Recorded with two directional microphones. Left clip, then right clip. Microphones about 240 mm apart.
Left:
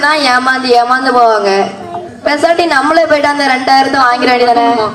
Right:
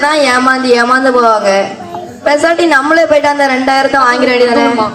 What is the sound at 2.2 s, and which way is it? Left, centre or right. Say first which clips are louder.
A woman's voice: right 1 dB; left.